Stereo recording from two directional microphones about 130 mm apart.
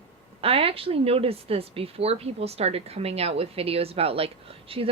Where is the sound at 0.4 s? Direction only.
45° right (ahead or behind).